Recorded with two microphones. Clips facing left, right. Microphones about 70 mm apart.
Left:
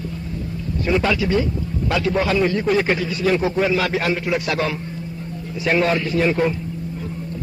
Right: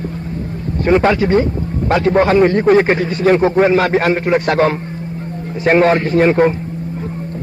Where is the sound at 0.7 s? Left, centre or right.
Right.